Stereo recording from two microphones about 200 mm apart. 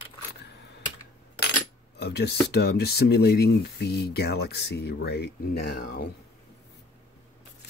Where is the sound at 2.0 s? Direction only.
55° left (ahead or behind).